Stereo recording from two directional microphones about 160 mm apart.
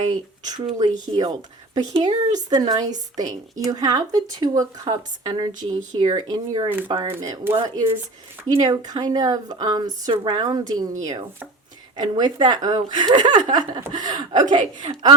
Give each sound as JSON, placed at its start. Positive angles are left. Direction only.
{"t": 0.4, "sound": "speech", "side_deg": -25}
{"t": 7.1, "sound": "speech", "side_deg": -15}
{"t": 11.9, "sound": "speech", "side_deg": -25}